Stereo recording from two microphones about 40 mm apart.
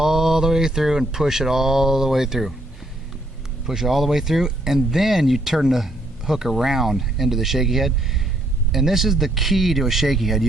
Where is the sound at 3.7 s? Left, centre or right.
Centre.